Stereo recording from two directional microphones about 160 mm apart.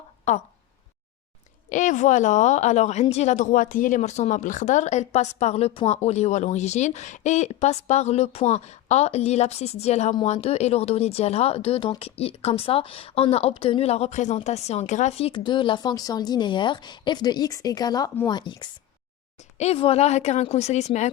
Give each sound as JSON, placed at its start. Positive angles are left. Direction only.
{"t": 1.7, "sound": "a woman's voice", "side_deg": 50}
{"t": 19.5, "sound": "a woman's voice", "side_deg": 40}